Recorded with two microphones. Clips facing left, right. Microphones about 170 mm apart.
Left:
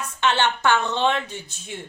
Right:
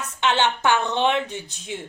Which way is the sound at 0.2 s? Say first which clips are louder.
Even; 15° right (ahead or behind).